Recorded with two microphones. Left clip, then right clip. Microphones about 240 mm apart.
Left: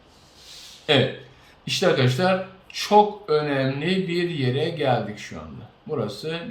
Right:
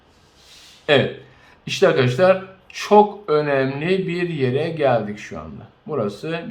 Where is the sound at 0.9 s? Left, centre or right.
Centre.